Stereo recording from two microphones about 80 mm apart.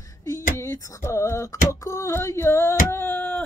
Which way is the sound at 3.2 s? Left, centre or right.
Centre.